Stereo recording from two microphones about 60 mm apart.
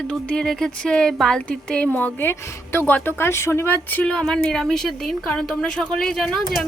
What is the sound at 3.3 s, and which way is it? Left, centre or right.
Speech, left.